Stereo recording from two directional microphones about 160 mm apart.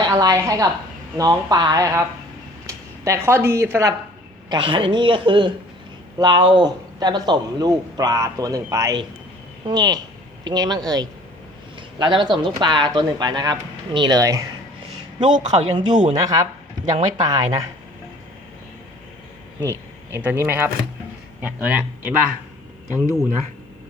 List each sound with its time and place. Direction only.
0.0 s a man's voice: 25° right (ahead or behind)
4.4 s a woman's voice: 30° right (ahead or behind)
20.1 s speech: 15° right (ahead or behind)